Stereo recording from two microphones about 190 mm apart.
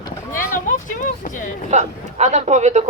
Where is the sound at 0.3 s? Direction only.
45° left (ahead or behind).